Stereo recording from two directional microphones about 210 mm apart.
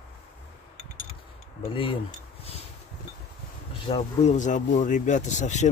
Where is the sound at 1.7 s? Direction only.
25° left (ahead or behind).